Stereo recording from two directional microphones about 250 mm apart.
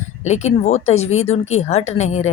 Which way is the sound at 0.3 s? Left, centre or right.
Left.